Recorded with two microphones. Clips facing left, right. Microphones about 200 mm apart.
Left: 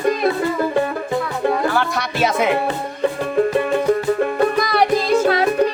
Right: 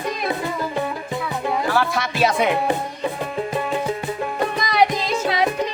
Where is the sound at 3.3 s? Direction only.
55° left (ahead or behind).